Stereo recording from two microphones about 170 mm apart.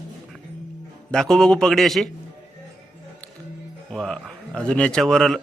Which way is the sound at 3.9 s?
5° left (ahead or behind).